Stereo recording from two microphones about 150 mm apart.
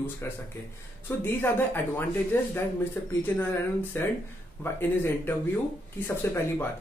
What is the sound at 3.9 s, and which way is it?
Speech, 15° left (ahead or behind).